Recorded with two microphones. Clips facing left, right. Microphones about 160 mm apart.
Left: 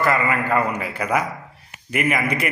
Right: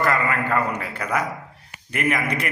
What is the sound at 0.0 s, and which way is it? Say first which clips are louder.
A man's voice: left 2 dB; 5° left (ahead or behind).